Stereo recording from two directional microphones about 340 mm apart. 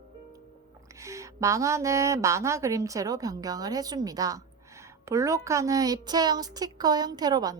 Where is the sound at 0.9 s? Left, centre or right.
Centre.